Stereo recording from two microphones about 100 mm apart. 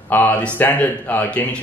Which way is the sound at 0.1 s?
20° left (ahead or behind).